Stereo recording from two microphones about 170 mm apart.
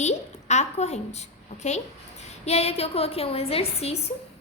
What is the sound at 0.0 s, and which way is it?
A woman's voice, 40° left (ahead or behind).